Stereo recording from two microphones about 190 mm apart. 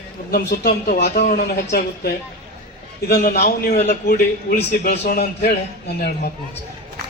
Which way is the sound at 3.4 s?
40° left (ahead or behind).